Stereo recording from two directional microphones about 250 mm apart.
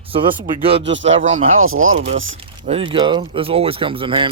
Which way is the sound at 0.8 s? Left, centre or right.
Right.